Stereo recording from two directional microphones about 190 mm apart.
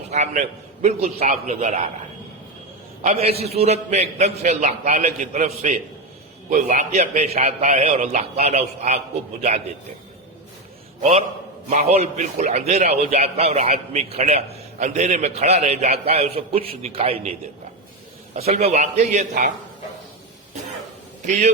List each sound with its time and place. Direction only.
0.1 s a man's voice: 35° right (ahead or behind)
3.0 s a man's voice: 35° right (ahead or behind)
11.0 s a man's voice: 35° right (ahead or behind)
18.3 s a man's voice: 35° right (ahead or behind)
21.2 s a man's voice: 40° right (ahead or behind)